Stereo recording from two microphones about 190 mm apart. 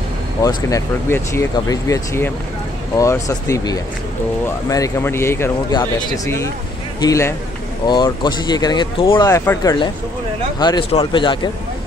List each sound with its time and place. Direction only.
0.4 s speech: 20° left (ahead or behind)